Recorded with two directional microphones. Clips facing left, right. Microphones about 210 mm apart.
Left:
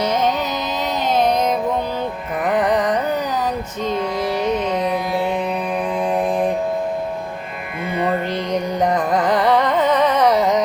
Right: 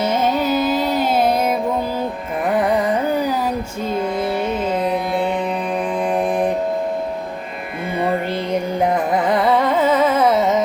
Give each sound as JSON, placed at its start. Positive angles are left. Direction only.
{"t": 0.0, "sound": "carnatic music", "side_deg": -5}
{"t": 3.8, "sound": "music", "side_deg": -5}
{"t": 6.1, "sound": "mantra", "side_deg": -15}
{"t": 7.9, "sound": "carnatic music", "side_deg": -10}